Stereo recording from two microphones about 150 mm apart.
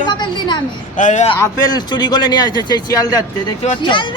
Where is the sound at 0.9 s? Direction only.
55° left (ahead or behind).